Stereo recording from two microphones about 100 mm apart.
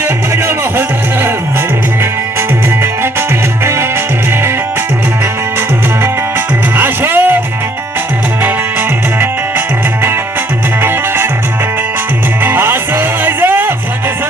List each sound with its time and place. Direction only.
0.0 s music: 25° right (ahead or behind)
2.8 s music: 25° right (ahead or behind)
8.4 s music: 20° right (ahead or behind)
12.4 s music: 20° right (ahead or behind)